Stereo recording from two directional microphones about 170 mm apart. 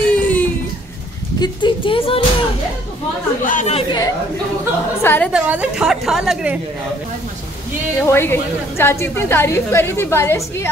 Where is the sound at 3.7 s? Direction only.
25° left (ahead or behind).